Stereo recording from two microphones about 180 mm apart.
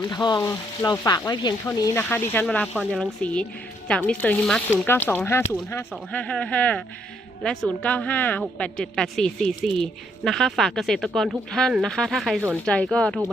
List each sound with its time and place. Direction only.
0.1 s speech: 25° left (ahead or behind)
2.0 s speech: 10° left (ahead or behind)
2.7 s a woman's voice: 5° right (ahead or behind)